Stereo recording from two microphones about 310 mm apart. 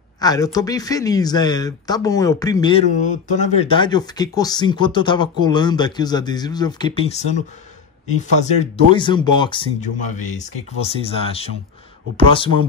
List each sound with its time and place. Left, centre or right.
0.2 s speech: centre
8.9 s speech: centre